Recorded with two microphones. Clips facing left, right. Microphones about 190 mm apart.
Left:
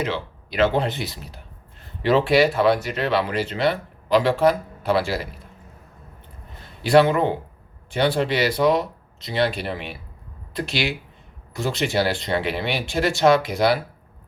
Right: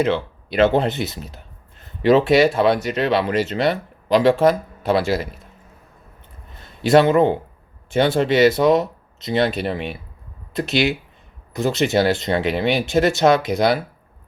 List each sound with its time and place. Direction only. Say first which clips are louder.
0.5 s speech: right 4 dB; 25° right (ahead or behind)
6.8 s speech: right 3 dB; 20° right (ahead or behind)